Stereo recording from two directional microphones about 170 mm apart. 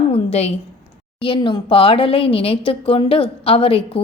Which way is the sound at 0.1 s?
35° left (ahead or behind).